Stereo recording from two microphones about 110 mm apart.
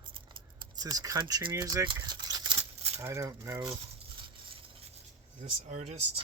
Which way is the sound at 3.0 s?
30° right (ahead or behind).